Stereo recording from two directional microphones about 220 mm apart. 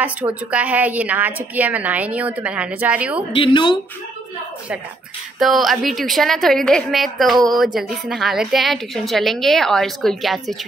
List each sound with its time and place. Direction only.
0.0 s a woman's voice: 5° right (ahead or behind)
3.3 s speech: 20° left (ahead or behind)
5.4 s a woman's voice: centre (ahead or behind)